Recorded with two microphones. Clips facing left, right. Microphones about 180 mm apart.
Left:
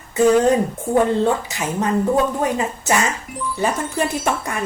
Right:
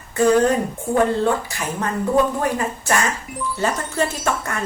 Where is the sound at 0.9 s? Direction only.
Centre (ahead or behind).